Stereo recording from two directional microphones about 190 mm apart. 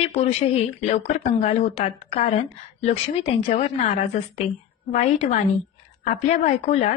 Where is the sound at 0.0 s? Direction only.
35° left (ahead or behind).